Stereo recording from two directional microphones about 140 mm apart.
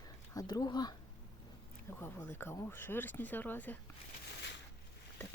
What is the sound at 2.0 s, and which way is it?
Speech, 15° left (ahead or behind).